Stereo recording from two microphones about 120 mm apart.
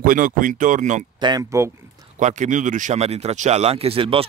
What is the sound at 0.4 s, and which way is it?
Speech, 90° right.